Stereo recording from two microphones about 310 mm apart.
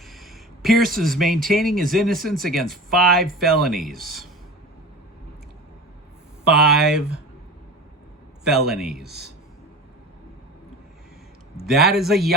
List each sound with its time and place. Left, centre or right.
0.0 s a sound: centre
0.9 s speech: centre
6.5 s speech: centre
8.4 s speech: centre
9.0 s speech: right
11.5 s speech: centre